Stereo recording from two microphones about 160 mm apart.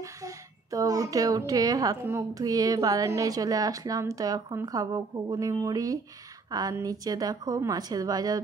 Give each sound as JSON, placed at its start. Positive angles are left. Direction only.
{"t": 0.2, "sound": "a woman's voice", "side_deg": -20}